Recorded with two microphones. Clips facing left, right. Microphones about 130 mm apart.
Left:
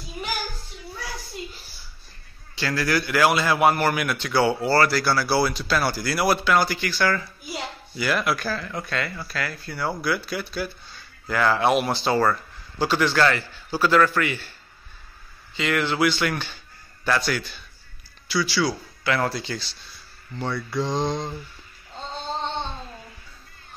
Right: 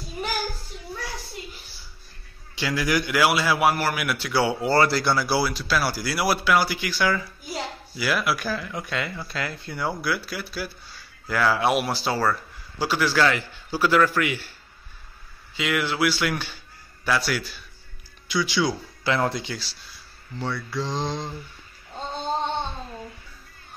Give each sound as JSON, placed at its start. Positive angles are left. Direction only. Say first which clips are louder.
{"t": 2.5, "sound": "a man's voice", "louder": "even", "side_deg": -15}
{"t": 5.4, "sound": "a man's voice", "louder": "left 2 dB", "side_deg": -5}
{"t": 10.0, "sound": "a man's voice", "louder": "left 2 dB", "side_deg": -5}
{"t": 15.5, "sound": "a man's voice", "louder": "left 2 dB", "side_deg": -10}
{"t": 18.3, "sound": "a man's voice", "louder": "even", "side_deg": -15}
{"t": 19.5, "sound": "a man's voice", "louder": "left 2 dB", "side_deg": -5}